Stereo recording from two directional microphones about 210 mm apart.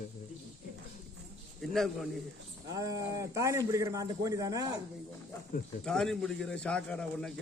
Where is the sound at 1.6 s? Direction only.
Centre (ahead or behind).